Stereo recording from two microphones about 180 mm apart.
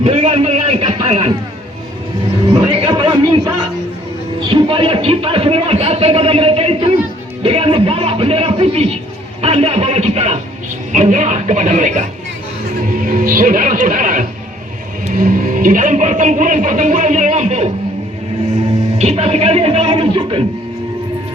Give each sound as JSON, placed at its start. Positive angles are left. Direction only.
{"t": 0.0, "sound": "a sound", "side_deg": -35}
{"t": 2.6, "sound": "chatter", "side_deg": -30}
{"t": 4.4, "sound": "music", "side_deg": -30}
{"t": 9.4, "sound": "speech", "side_deg": -35}
{"t": 18.9, "sound": "music", "side_deg": -35}